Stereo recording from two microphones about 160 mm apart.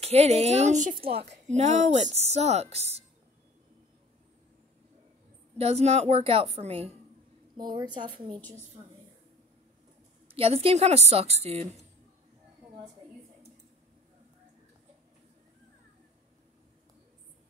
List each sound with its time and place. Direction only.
0.0 s a woman's voice: 40° right (ahead or behind)
1.0 s a woman's voice: 35° right (ahead or behind)
5.6 s a woman's voice: 40° right (ahead or behind)
7.5 s a woman's voice: 25° right (ahead or behind)
10.2 s a woman's voice: 35° right (ahead or behind)